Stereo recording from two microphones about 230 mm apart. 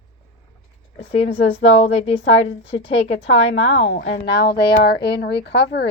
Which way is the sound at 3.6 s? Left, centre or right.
Left.